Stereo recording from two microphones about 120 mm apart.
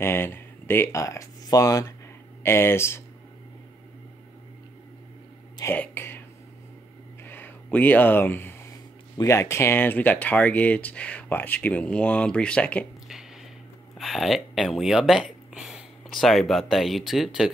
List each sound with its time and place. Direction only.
0.0 s speech: 20° left (ahead or behind)
5.8 s speech: 15° left (ahead or behind)
7.2 s a sound: 15° left (ahead or behind)
9.2 s speech: 25° left (ahead or behind)
13.9 s speech: centre (ahead or behind)